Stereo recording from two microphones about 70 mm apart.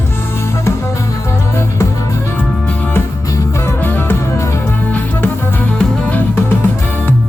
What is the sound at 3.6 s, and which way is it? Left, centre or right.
Music, left.